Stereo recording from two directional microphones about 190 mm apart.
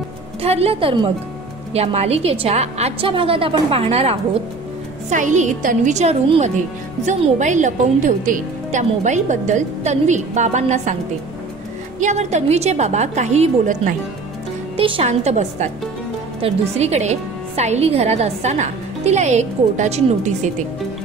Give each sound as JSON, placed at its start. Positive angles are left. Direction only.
{"t": 0.4, "sound": "speech", "side_deg": -30}
{"t": 12.0, "sound": "speech", "side_deg": -40}
{"t": 14.8, "sound": "speech", "side_deg": -30}